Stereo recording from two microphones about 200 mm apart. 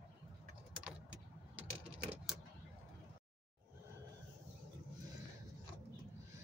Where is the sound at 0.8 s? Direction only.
5° right (ahead or behind).